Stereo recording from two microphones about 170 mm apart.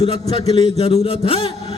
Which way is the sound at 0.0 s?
35° left (ahead or behind).